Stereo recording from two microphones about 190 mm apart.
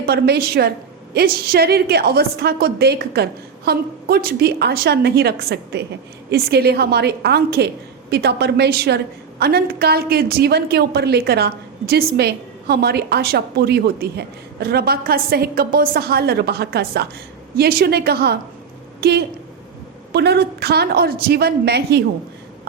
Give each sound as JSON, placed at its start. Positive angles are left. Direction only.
{"t": 0.0, "sound": "a woman's voice", "side_deg": -55}